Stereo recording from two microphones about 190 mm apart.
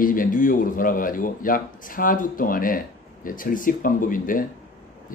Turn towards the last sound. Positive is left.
turn(degrees=45)  # may be behind; listen again after turning